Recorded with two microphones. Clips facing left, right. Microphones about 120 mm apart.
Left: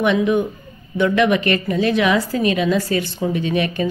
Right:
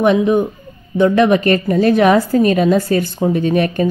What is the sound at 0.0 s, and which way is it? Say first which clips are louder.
A woman's voice: right 4 dB; 40° right (ahead or behind).